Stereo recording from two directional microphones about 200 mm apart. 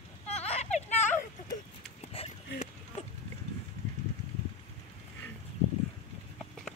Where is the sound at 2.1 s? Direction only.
30° left (ahead or behind).